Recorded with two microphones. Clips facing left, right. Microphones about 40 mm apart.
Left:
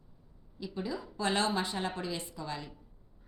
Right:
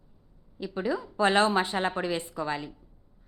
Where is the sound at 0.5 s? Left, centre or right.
Right.